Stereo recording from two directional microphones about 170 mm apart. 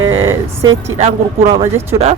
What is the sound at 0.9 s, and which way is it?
Speech, 35° right (ahead or behind).